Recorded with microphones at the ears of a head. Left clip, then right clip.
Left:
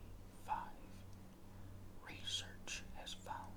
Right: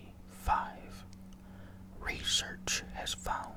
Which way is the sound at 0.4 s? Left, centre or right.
Right.